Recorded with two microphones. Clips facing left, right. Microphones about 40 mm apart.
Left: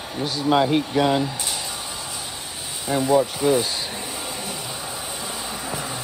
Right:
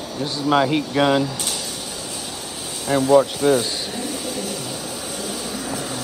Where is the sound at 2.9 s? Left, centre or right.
Right.